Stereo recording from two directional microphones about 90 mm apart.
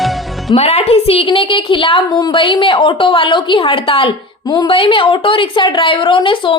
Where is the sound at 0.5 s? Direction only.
70° left (ahead or behind).